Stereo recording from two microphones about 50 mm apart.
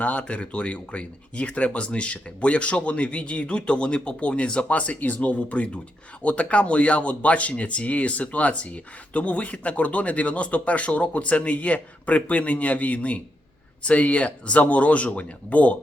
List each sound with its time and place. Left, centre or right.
0.0 s speech: left